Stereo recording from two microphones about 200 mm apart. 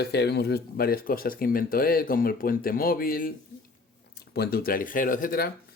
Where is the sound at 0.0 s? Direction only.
55° left (ahead or behind).